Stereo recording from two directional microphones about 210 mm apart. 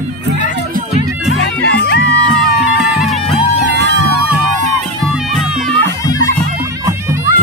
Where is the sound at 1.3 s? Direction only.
55° left (ahead or behind).